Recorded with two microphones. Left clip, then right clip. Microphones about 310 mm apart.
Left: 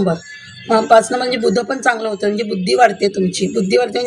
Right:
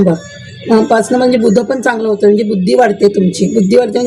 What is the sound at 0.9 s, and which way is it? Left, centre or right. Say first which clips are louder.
Speech: right 2 dB; left.